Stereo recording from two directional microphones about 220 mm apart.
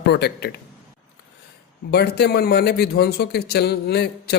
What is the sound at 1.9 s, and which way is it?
A man's voice, 50° left (ahead or behind).